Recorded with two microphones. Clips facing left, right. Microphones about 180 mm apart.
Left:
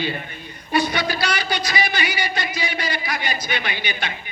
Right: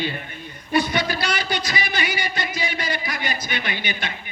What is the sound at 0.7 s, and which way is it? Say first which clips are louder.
Speech: even; 50° right (ahead or behind).